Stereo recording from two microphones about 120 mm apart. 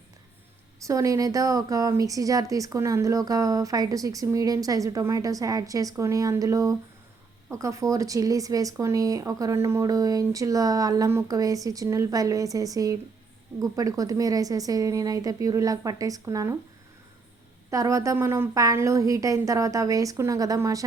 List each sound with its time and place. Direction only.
0.9 s speech: 25° right (ahead or behind)
17.7 s speech: 25° right (ahead or behind)